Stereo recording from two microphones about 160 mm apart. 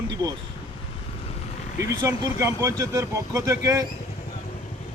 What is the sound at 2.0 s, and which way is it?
Speech, 20° right (ahead or behind).